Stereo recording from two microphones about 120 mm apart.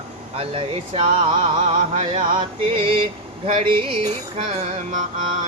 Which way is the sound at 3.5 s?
65° right (ahead or behind).